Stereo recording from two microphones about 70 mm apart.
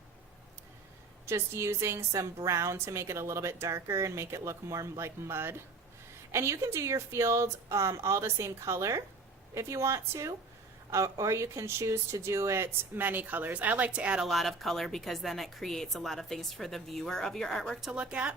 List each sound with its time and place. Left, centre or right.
1.3 s speech: right; by 14.3 s centre
14.3 s a woman's voice: centre
17.9 s speech: centre